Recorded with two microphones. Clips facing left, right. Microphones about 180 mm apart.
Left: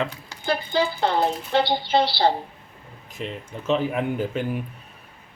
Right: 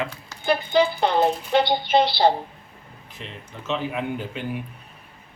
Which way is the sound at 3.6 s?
45° left (ahead or behind).